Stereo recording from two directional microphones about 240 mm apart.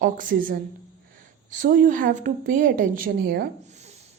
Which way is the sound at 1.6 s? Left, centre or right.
Right.